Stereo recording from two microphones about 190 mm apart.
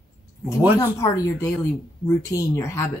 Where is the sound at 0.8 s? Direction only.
15° left (ahead or behind).